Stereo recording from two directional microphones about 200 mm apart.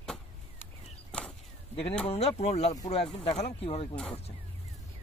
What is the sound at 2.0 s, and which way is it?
Speech, 30° left (ahead or behind).